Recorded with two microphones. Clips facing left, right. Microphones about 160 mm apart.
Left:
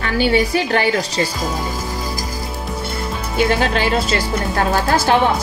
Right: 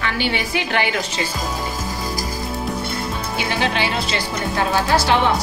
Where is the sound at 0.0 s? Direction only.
40° left (ahead or behind).